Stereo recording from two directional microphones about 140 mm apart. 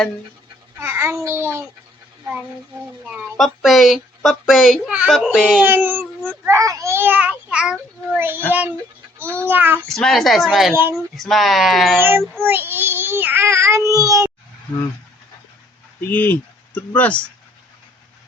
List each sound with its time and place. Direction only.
0.8 s a child's voice: 15° right (ahead or behind)
3.3 s a child's voice: centre (ahead or behind)
5.6 s a child's voice: 15° right (ahead or behind)
9.9 s a child's voice: centre (ahead or behind)
11.9 s a child's voice: 15° right (ahead or behind)
12.4 s child singing: 15° right (ahead or behind)
16.0 s speech: 15° left (ahead or behind)